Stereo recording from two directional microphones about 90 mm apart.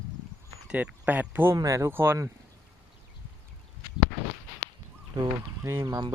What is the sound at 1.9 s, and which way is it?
Speech, 25° right (ahead or behind).